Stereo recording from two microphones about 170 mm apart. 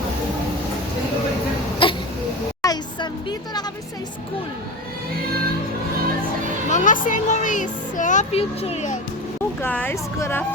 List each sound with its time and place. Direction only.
1.8 s throat clearing: 30° left (ahead or behind)
2.6 s a sound: 25° left (ahead or behind)
6.7 s speech: 45° left (ahead or behind)
9.6 s speech: 10° left (ahead or behind)